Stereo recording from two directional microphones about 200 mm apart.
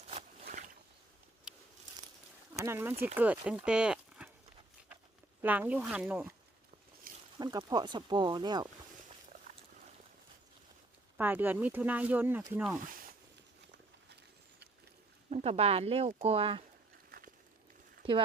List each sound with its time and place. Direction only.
0.4 s boat: 40° right (ahead or behind)
1.5 s a sound: 5° right (ahead or behind)
2.6 s speech: 10° right (ahead or behind)
5.4 s speech: 10° right (ahead or behind)
7.3 s speech: 20° right (ahead or behind)
11.2 s speech: 10° right (ahead or behind)
12.8 s speech: 45° right (ahead or behind)
15.3 s speech: 35° right (ahead or behind)
17.1 s walk: 50° right (ahead or behind)